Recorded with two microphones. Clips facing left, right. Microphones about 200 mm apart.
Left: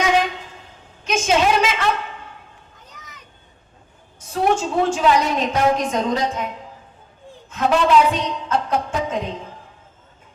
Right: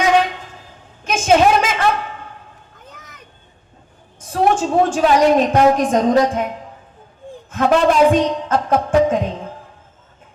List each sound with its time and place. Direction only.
0.0 s a sound: 55° right (ahead or behind)
4.3 s a woman's voice: 55° right (ahead or behind)
7.5 s a woman's voice: 50° right (ahead or behind)